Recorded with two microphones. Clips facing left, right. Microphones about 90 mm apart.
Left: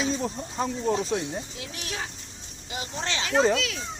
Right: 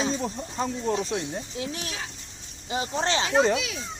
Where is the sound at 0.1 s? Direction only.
Centre (ahead or behind).